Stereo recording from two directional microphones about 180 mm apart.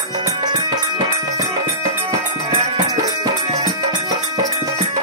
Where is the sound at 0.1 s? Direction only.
20° right (ahead or behind).